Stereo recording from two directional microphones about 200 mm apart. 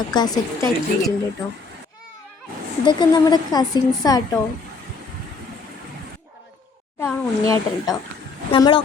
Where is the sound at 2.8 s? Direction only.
20° left (ahead or behind).